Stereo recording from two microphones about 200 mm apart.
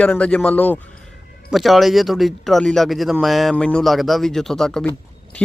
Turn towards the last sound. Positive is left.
turn(degrees=5)  # may be behind; listen again after turning